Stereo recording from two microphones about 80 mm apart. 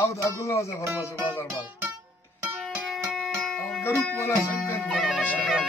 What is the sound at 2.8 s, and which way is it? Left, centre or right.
Music, centre.